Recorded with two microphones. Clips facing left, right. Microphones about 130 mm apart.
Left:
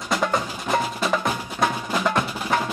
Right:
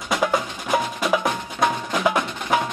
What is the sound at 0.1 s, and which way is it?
Percussion, centre (ahead or behind).